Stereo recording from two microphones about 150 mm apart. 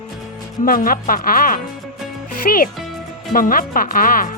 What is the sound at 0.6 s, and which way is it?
Speech, 70° left (ahead or behind).